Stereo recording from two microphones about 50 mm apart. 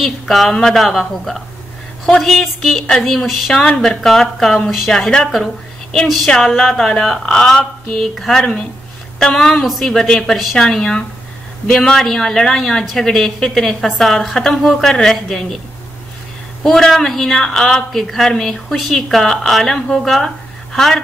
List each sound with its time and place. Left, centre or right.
0.0 s a woman's voice: centre
3.6 s a woman's voice: centre
6.9 s a woman's voice: centre
16.6 s a woman's voice: centre